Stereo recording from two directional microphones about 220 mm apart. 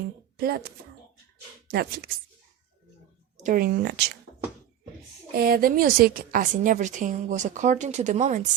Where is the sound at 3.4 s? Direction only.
40° right (ahead or behind).